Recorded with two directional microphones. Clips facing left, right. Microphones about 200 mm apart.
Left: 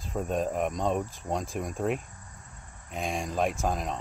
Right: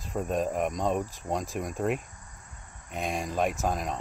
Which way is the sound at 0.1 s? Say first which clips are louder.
Even; centre (ahead or behind).